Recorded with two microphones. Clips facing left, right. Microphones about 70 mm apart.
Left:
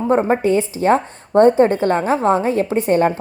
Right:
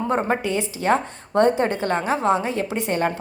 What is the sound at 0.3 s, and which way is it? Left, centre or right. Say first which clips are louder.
A woman's voice: left 7 dB; left.